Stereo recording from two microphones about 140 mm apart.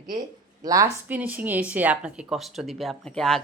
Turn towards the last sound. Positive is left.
turn(degrees=5)  # may be behind; listen again after turning